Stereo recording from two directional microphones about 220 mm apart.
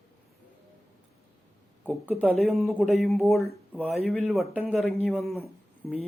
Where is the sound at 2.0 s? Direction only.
Centre (ahead or behind).